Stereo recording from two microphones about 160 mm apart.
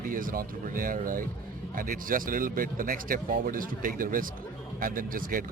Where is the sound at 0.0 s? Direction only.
60° right (ahead or behind).